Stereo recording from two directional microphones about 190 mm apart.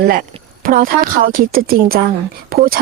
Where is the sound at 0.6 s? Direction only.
45° right (ahead or behind).